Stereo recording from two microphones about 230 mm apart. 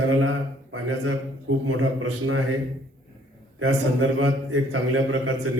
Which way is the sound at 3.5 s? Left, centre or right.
Right.